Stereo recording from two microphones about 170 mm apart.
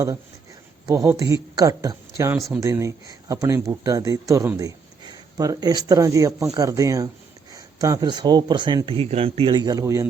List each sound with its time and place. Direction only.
0.9 s speech: 20° right (ahead or behind)